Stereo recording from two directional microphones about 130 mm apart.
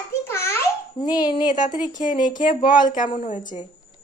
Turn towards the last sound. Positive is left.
turn(degrees=90)